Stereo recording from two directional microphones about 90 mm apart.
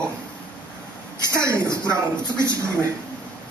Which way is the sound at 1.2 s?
30° right (ahead or behind).